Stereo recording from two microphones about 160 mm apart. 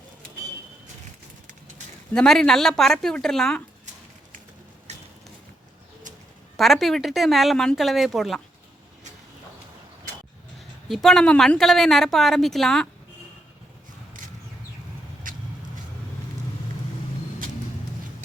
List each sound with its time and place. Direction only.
2.1 s a woman's voice: 5° left (ahead or behind)
6.6 s a woman's voice: centre (ahead or behind)
10.8 s a woman's voice: centre (ahead or behind)
15.3 s vehicle: 55° right (ahead or behind)